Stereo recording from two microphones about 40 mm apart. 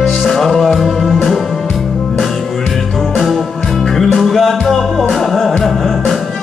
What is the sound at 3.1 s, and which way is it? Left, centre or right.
Music, centre.